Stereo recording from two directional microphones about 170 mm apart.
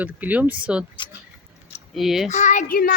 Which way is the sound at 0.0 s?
10° right (ahead or behind).